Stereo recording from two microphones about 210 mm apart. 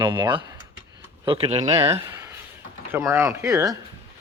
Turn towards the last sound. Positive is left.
turn(degrees=-15)  # may be behind; listen again after turning